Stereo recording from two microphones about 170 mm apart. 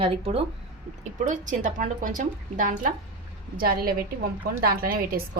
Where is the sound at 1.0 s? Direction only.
50° right (ahead or behind).